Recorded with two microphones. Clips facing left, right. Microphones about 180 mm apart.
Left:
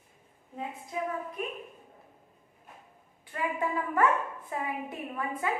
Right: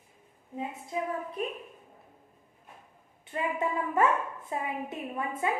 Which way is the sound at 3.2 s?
25° right (ahead or behind).